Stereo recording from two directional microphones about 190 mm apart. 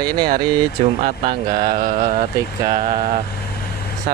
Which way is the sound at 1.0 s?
40° right (ahead or behind).